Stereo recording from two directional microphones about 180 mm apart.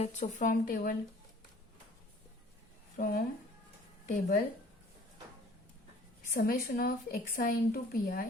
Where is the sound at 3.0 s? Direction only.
50° left (ahead or behind).